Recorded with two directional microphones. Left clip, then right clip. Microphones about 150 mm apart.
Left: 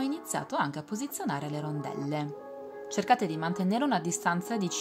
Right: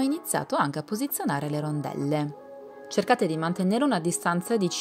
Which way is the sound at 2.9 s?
45° right (ahead or behind).